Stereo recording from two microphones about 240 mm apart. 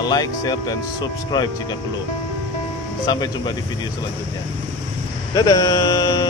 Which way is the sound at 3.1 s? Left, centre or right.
Centre.